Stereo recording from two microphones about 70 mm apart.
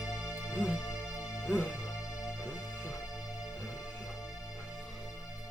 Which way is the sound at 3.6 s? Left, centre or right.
Left.